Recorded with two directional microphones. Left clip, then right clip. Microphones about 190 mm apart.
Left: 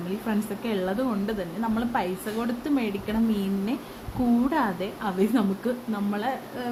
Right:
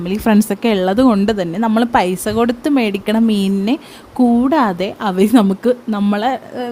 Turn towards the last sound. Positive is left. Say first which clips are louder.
# right 11 dB
turn(degrees=-45)  # may be behind; listen again after turning